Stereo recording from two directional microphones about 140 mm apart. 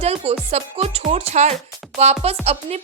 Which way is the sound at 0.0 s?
50° right (ahead or behind).